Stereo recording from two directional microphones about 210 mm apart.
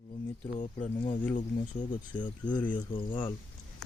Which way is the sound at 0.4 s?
25° left (ahead or behind).